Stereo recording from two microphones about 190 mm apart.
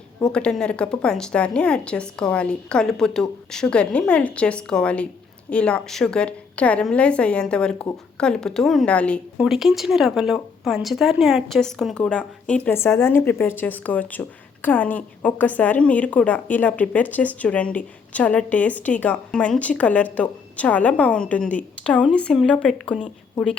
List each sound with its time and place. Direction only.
0.3 s a woman's voice: 5° left (ahead or behind)